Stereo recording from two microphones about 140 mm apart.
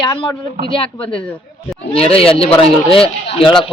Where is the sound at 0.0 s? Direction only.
35° left (ahead or behind).